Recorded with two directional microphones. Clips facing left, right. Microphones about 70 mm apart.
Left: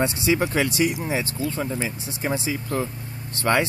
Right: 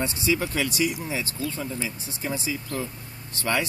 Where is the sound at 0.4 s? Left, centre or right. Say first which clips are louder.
Left 4 dB; left.